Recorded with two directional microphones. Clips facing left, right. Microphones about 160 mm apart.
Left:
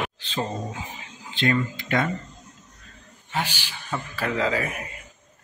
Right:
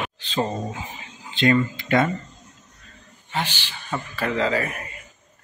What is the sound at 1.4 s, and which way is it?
Speech, 25° right (ahead or behind).